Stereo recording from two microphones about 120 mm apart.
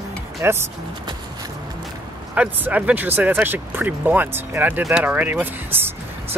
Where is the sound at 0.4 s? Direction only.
20° right (ahead or behind).